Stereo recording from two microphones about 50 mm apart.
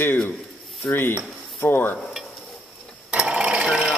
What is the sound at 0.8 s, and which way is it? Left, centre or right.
Speech, left.